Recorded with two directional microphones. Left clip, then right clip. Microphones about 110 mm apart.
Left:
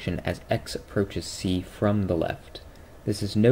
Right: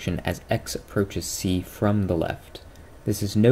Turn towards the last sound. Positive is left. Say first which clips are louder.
# right 1 dB
turn(degrees=-25)  # may be behind; listen again after turning